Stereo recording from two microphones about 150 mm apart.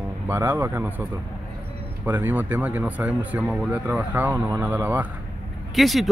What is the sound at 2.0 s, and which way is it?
Speech, 15° right (ahead or behind).